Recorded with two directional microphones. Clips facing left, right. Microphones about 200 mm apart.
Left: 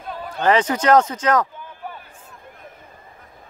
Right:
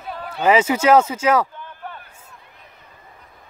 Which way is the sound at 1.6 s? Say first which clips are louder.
Left 1 dB; 10° left (ahead or behind).